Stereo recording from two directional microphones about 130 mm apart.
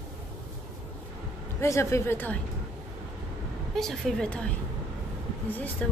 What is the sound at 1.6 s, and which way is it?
Speech, 20° left (ahead or behind).